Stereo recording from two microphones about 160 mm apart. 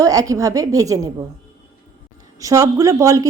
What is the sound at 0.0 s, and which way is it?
A woman's voice, 20° right (ahead or behind).